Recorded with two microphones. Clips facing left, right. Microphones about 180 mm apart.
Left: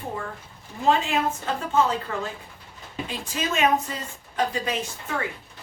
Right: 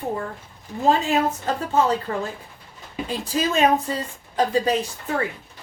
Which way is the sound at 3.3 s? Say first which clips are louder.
Right 4 dB; 35° right (ahead or behind).